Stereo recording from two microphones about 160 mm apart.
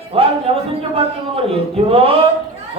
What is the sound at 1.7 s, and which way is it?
Speech, 35° right (ahead or behind).